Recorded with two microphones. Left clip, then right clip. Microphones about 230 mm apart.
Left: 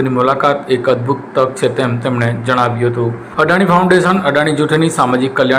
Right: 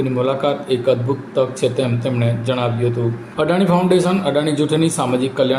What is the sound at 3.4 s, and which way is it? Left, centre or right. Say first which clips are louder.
Speech: left 6 dB; left.